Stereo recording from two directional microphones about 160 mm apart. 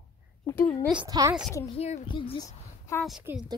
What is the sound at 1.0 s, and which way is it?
Speech, 25° right (ahead or behind).